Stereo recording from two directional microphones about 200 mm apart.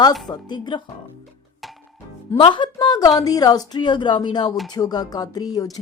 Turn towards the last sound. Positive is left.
turn(degrees=20)  # may be behind; listen again after turning